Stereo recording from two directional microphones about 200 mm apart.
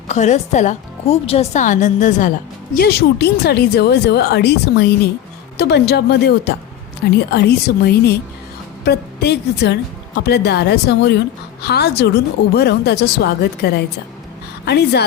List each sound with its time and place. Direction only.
0.1 s a woman's voice: 35° left (ahead or behind)
2.7 s a woman's voice: 55° left (ahead or behind)